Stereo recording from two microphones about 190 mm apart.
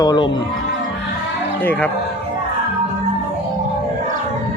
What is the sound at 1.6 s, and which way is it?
Speech, 10° left (ahead or behind).